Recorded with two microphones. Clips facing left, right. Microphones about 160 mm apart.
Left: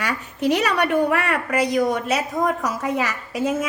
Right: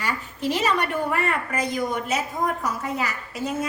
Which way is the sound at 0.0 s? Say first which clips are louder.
Left 4 dB; 75° left (ahead or behind).